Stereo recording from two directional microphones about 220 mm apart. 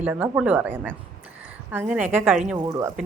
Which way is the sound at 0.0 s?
5° right (ahead or behind).